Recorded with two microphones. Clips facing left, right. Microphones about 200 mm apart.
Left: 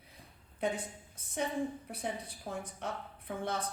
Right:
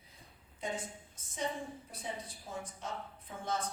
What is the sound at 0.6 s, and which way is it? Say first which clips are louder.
A woman's voice: left 5 dB; 65° left (ahead or behind).